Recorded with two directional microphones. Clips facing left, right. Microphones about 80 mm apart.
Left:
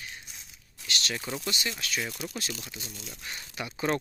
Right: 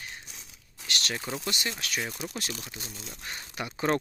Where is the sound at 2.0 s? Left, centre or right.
Right.